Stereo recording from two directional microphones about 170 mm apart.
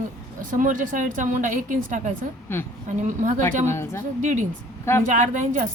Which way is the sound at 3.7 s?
15° left (ahead or behind).